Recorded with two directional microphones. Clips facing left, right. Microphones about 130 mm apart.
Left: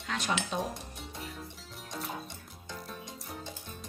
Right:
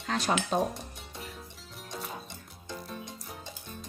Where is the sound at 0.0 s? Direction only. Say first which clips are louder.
Right 4 dB; 35° right (ahead or behind).